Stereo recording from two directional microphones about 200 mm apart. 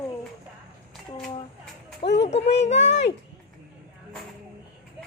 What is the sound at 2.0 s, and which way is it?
Speech, 60° left (ahead or behind).